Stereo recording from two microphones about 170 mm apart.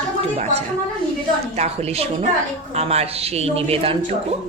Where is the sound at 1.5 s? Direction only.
40° right (ahead or behind).